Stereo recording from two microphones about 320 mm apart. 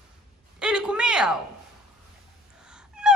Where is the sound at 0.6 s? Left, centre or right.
Centre.